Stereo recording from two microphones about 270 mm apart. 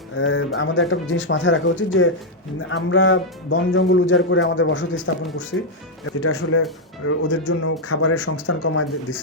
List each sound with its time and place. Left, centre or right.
0.2 s speech: left